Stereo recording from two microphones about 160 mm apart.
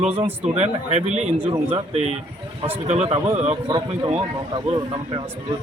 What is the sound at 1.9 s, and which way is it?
Speech, 45° right (ahead or behind).